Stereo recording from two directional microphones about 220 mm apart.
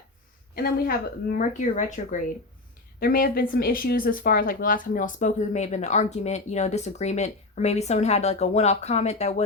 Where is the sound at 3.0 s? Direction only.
40° left (ahead or behind).